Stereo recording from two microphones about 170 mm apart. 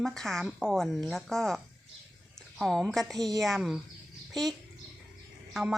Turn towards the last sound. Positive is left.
turn(degrees=0)  # may be behind; listen again after turning